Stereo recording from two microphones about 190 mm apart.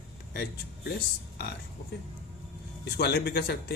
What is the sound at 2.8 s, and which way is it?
Speech, 60° left (ahead or behind).